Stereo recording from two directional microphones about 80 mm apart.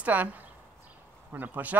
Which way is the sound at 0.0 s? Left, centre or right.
Right.